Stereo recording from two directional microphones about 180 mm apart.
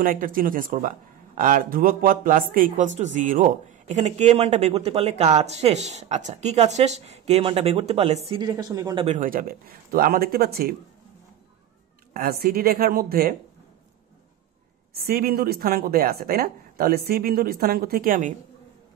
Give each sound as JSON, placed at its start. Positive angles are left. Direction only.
{"t": 0.0, "sound": "speech", "side_deg": -50}
{"t": 8.3, "sound": "speech", "side_deg": -25}
{"t": 9.0, "sound": "a woman's voice", "side_deg": -45}
{"t": 12.1, "sound": "a woman's voice", "side_deg": -60}
{"t": 15.0, "sound": "a woman's voice", "side_deg": -55}